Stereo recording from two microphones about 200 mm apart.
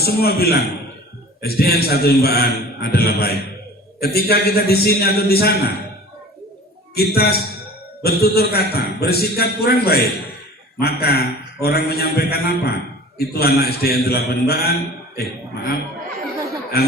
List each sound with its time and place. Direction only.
0.0 s a man's voice: 50° left (ahead or behind)
6.9 s a man's voice: 50° left (ahead or behind)